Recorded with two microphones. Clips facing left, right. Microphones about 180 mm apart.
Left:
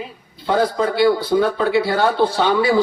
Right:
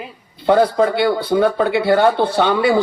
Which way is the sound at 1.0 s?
55° right (ahead or behind).